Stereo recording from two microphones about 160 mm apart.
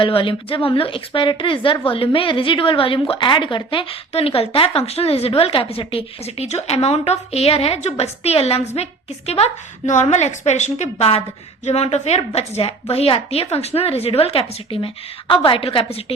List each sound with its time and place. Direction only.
0.0 s a woman's voice: 30° left (ahead or behind)